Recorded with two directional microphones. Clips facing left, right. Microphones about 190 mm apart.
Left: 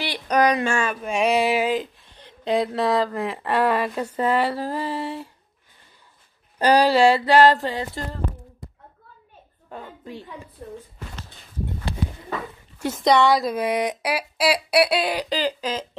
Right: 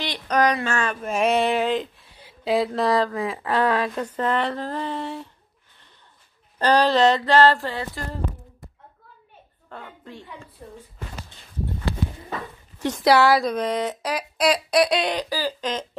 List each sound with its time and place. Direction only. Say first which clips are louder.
0.0 s a sound: left 1 dB; 10° left (ahead or behind)
1.0 s speech: even; centre (ahead or behind)
2.0 s speech: even; 10° right (ahead or behind)
6.6 s speech: left 2 dB; 10° left (ahead or behind)
10.0 s speech: left 3 dB; 15° left (ahead or behind)
12.7 s a sound: right 1 dB; 10° left (ahead or behind)
13.0 s speech: even; 5° right (ahead or behind)
15.2 s speech: left 3 dB; 20° left (ahead or behind)
15.6 s speech: even; 5° left (ahead or behind)